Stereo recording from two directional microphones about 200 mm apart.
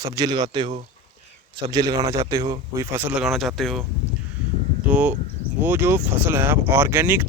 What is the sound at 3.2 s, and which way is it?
Speech, centre (ahead or behind).